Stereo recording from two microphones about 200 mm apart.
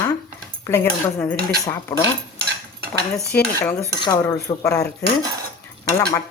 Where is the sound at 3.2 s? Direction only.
50° left (ahead or behind).